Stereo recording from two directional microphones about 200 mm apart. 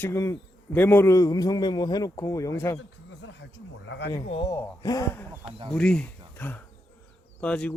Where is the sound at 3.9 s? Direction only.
55° left (ahead or behind).